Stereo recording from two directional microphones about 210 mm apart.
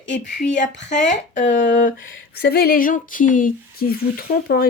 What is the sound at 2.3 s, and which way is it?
Speech, 45° left (ahead or behind).